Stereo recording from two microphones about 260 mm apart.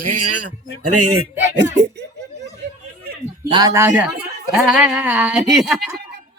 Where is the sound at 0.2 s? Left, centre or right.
Right.